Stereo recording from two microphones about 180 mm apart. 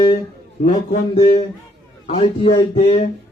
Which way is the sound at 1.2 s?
40° left (ahead or behind).